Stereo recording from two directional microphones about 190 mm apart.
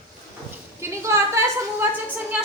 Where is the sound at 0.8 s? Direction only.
15° right (ahead or behind).